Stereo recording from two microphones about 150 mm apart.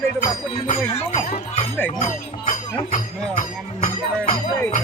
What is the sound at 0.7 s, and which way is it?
Speech, 50° left (ahead or behind).